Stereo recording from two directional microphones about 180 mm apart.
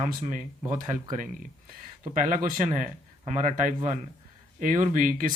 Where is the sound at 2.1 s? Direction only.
45° right (ahead or behind).